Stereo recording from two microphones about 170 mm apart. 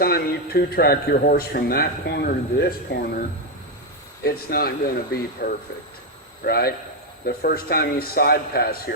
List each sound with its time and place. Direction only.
0.0 s a man's voice: 65° left (ahead or behind)
4.2 s a man's voice: 65° left (ahead or behind)